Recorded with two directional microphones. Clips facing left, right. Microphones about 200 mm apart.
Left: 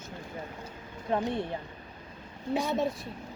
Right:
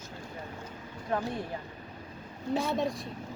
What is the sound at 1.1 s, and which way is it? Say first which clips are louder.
Speech: left 3 dB; 25° left (ahead or behind).